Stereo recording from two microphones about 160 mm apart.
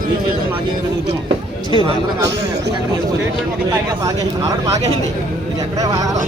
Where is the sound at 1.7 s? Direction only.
30° left (ahead or behind).